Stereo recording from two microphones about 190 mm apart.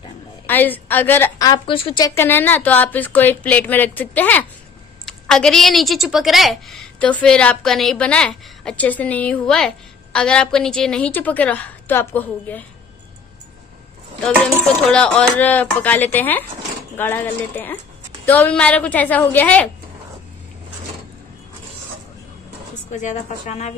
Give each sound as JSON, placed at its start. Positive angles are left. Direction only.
{"t": 0.5, "sound": "a woman's voice", "side_deg": 10}
{"t": 14.2, "sound": "a woman's voice", "side_deg": 5}
{"t": 22.8, "sound": "a woman's voice", "side_deg": 40}